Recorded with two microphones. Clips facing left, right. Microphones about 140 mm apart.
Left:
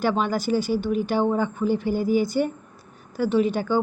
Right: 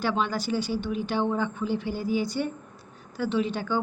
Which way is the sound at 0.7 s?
45° left (ahead or behind).